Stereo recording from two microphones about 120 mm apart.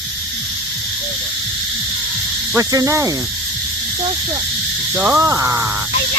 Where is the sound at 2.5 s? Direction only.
25° right (ahead or behind).